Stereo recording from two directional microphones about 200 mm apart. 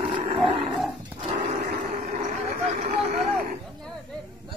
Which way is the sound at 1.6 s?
45° right (ahead or behind).